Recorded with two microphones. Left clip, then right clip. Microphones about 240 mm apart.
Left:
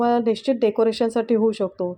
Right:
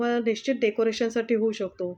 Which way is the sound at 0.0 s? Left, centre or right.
Centre.